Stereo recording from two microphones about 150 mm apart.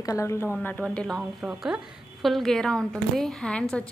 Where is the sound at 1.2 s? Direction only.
5° right (ahead or behind).